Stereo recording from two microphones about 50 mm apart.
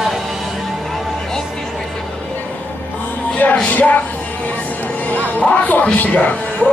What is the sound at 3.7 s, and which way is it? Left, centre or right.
Music, left.